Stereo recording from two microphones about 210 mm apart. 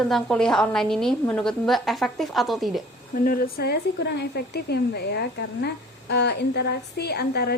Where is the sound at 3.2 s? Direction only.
45° left (ahead or behind).